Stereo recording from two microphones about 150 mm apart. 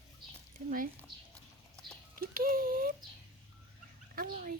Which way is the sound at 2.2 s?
70° right (ahead or behind).